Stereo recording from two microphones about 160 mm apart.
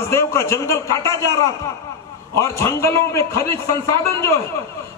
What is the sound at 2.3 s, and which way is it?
A man's voice, 20° left (ahead or behind).